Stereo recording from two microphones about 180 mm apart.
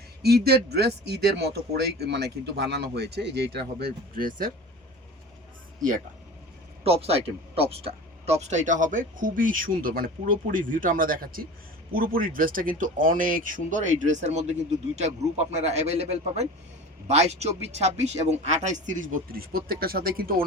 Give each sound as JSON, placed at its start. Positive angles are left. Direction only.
{"t": 0.2, "sound": "speech", "side_deg": -60}
{"t": 6.8, "sound": "speech", "side_deg": -35}